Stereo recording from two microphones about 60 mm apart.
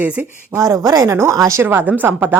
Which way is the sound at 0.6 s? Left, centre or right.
Right.